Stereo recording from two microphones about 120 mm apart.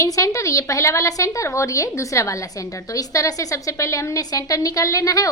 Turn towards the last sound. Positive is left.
turn(degrees=30)  # may be behind; listen again after turning